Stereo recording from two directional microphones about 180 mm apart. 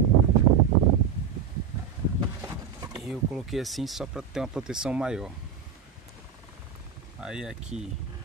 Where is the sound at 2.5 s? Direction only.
20° right (ahead or behind).